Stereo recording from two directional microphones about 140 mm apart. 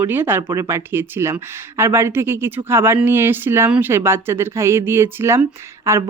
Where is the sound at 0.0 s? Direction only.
15° right (ahead or behind).